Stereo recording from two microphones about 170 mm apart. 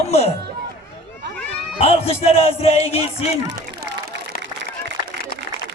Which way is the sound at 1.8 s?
35° left (ahead or behind).